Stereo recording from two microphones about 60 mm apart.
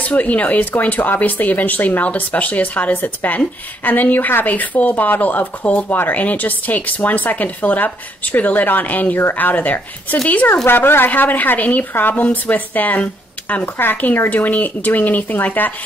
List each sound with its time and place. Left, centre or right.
0.0 s speech: left
10.5 s speech: left